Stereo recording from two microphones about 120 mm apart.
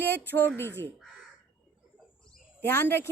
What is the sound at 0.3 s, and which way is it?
Speech, 20° left (ahead or behind).